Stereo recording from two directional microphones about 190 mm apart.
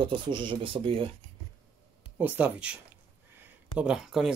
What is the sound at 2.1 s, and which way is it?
Speech, 10° right (ahead or behind).